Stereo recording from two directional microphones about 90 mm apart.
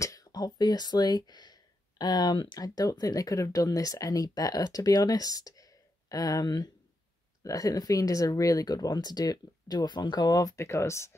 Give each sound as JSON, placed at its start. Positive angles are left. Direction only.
{"t": 0.0, "sound": "speech", "side_deg": 40}